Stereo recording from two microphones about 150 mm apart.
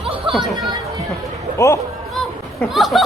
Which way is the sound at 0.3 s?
35° right (ahead or behind).